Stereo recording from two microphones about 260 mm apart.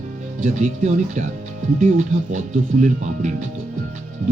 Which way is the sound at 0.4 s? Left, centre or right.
Right.